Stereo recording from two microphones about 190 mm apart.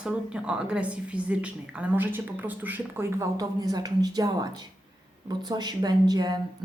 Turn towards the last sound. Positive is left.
turn(degrees=-20)  # may be behind; listen again after turning